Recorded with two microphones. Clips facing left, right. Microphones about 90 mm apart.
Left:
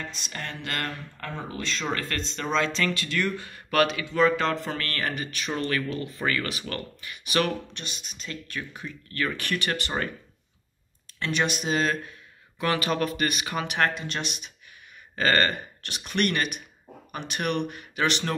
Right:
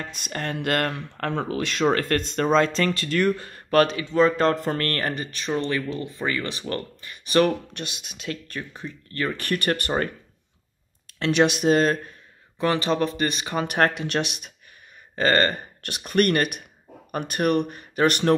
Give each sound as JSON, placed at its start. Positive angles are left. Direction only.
{"t": 0.1, "sound": "speech", "side_deg": -55}
{"t": 4.6, "sound": "speech", "side_deg": -50}
{"t": 7.7, "sound": "speech", "side_deg": -55}
{"t": 8.5, "sound": "speech", "side_deg": -35}
{"t": 11.1, "sound": "speech", "side_deg": -65}
{"t": 12.5, "sound": "speech", "side_deg": -30}
{"t": 13.7, "sound": "speech", "side_deg": -50}
{"t": 13.9, "sound": "speech", "side_deg": -70}
{"t": 15.1, "sound": "speech", "side_deg": -35}
{"t": 16.0, "sound": "speech", "side_deg": -45}